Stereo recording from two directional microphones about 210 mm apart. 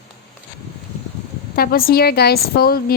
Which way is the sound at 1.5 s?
45° left (ahead or behind).